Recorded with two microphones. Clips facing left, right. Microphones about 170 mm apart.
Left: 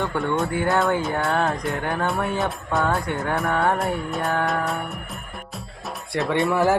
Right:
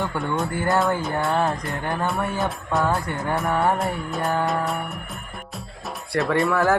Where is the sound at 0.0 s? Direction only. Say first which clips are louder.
Left 2 dB; centre (ahead or behind).